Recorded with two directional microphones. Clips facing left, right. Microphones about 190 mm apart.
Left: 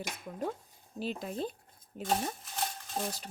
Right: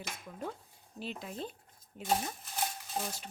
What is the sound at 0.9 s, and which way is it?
Speech, 40° left (ahead or behind).